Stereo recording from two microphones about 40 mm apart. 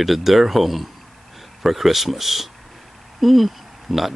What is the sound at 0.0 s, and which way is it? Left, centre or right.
Speech, centre.